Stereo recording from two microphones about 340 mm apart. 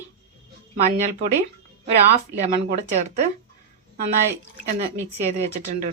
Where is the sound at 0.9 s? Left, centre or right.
Right.